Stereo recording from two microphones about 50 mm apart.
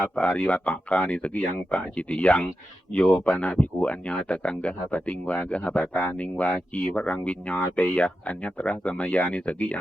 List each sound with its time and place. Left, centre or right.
0.2 s speech: left